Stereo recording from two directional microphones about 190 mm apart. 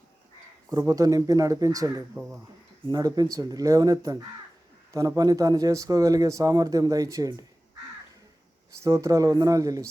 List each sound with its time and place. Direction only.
0.7 s speech: 20° right (ahead or behind)
2.1 s speech: 10° right (ahead or behind)
2.9 s speech: 20° right (ahead or behind)
8.8 s speech: 15° right (ahead or behind)